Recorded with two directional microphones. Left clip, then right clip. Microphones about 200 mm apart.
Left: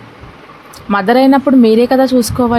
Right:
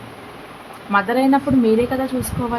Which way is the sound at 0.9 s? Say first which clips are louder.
Left 7 dB; 50° left (ahead or behind).